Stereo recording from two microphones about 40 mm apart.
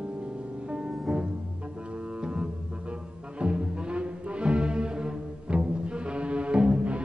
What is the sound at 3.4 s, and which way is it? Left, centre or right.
Music, right.